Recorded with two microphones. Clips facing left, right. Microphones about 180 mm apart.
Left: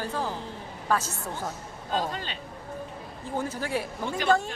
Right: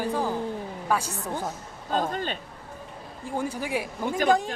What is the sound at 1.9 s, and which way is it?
Speech, 50° right (ahead or behind).